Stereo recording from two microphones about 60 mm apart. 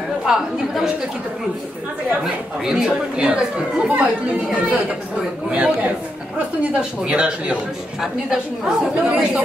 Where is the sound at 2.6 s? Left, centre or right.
Centre.